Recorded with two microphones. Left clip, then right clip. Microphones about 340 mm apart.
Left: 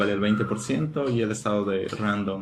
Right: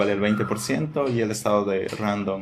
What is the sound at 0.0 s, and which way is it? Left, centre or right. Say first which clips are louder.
Speech: right 2 dB; centre.